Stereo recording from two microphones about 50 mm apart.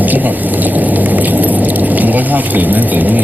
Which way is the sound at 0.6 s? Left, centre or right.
Right.